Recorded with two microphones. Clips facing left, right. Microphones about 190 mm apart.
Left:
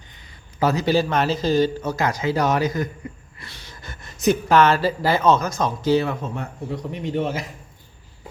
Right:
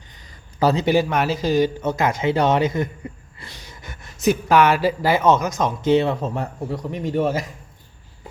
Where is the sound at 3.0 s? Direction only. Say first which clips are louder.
Right 1 dB; 30° right (ahead or behind).